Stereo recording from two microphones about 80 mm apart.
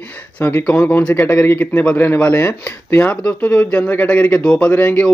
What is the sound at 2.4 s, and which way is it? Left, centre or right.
Speech, left.